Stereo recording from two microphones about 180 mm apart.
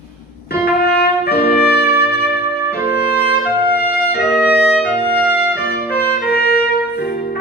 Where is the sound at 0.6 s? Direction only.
60° left (ahead or behind).